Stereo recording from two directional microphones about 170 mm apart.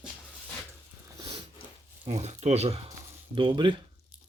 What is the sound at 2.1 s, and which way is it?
Speech, 40° right (ahead or behind).